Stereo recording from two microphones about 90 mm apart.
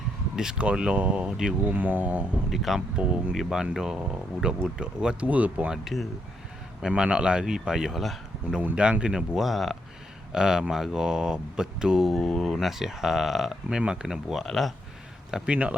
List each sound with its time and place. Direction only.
0.3 s speech: 10° right (ahead or behind)
1.7 s speech: 20° right (ahead or behind)
2.5 s speech: centre (ahead or behind)
14.4 s speech: 5° left (ahead or behind)
15.3 s speech: 10° right (ahead or behind)